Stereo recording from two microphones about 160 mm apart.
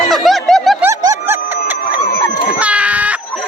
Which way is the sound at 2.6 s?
10° right (ahead or behind).